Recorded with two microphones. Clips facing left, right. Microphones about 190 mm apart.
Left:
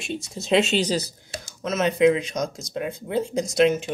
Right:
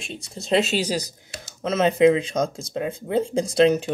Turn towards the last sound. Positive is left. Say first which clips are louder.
# right 2 dB
turn(degrees=-35)  # may be behind; listen again after turning